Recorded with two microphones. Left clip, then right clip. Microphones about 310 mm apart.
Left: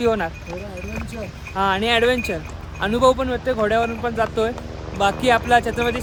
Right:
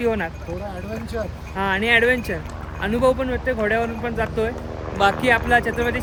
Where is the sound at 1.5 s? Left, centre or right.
Centre.